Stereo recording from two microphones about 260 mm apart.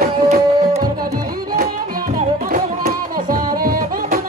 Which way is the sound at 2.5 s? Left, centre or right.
Right.